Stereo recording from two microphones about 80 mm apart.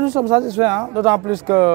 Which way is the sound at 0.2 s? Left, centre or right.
Right.